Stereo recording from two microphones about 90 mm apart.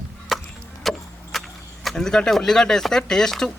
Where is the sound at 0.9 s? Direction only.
Centre (ahead or behind).